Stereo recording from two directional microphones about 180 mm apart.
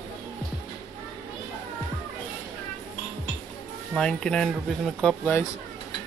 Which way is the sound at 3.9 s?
5° left (ahead or behind).